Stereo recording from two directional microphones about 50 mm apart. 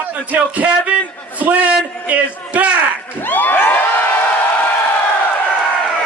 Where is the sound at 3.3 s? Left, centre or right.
Left.